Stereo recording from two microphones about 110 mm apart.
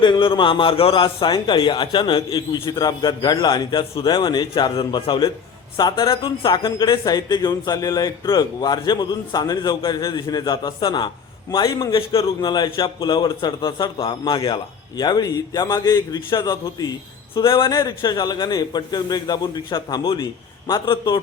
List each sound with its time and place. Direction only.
0.0 s a man's voice: 45° left (ahead or behind)
11.9 s a man's voice: 45° left (ahead or behind)
17.3 s a man's voice: 50° left (ahead or behind)
17.7 s a man's voice: 35° left (ahead or behind)